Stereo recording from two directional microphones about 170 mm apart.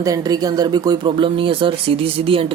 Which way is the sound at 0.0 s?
20° right (ahead or behind).